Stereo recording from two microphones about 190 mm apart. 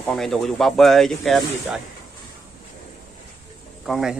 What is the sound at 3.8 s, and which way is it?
Speech, centre (ahead or behind).